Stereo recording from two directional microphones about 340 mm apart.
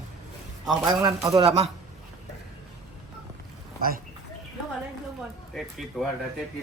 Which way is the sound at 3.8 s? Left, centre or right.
Right.